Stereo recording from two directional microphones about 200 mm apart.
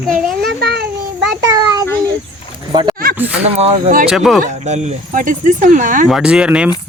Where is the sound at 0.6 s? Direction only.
50° right (ahead or behind).